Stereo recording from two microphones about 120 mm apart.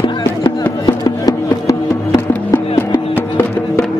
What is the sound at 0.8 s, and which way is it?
Music, 35° left (ahead or behind).